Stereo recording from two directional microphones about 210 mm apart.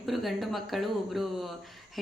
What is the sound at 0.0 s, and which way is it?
Speech, centre (ahead or behind).